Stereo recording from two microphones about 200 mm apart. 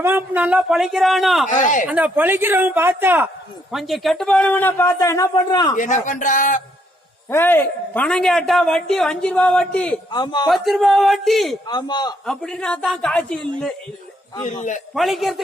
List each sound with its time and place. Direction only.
0.0 s a man's voice: 10° right (ahead or behind)
1.5 s a man's voice: 40° left (ahead or behind)
1.9 s speech: 5° right (ahead or behind); by 5.7 s 20° left (ahead or behind)
5.7 s a man's voice: 40° left (ahead or behind)
7.3 s a man's voice: 10° left (ahead or behind)
10.1 s a man's voice: 20° left (ahead or behind)
10.4 s a man's voice: centre (ahead or behind)
11.7 s a man's voice: 20° left (ahead or behind)
12.2 s a man's voice: centre (ahead or behind)
14.4 s a man's voice: 40° left (ahead or behind)
14.9 s a man's voice: centre (ahead or behind)